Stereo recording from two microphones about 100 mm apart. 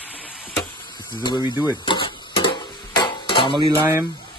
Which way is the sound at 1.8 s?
55° left (ahead or behind).